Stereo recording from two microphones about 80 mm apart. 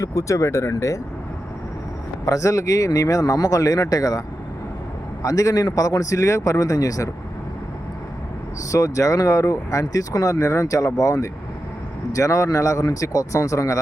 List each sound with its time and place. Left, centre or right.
0.0 s speech: left
2.2 s speech: left
5.2 s speech: left
8.7 s speech: left